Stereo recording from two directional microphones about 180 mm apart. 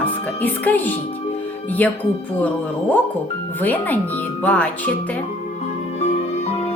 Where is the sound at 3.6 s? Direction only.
10° left (ahead or behind).